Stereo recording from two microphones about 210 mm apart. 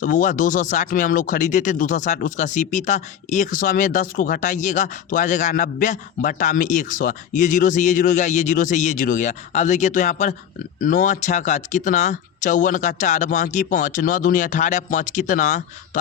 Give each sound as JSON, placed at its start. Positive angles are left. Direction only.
{"t": 0.0, "sound": "speech", "side_deg": 40}